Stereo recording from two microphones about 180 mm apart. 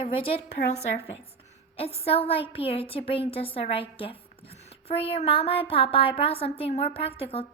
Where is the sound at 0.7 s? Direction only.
35° left (ahead or behind).